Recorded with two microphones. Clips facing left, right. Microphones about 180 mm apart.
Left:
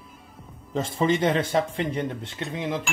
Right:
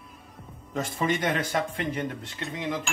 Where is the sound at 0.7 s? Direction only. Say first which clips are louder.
Left 4 dB; 25° left (ahead or behind).